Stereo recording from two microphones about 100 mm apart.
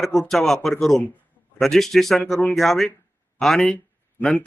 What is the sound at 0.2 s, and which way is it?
A man's voice, 5° left (ahead or behind).